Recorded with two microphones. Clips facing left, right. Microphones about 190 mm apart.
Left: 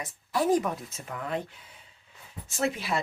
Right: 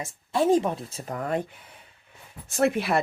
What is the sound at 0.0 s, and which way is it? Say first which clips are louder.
Speech: right 4 dB; 25° right (ahead or behind).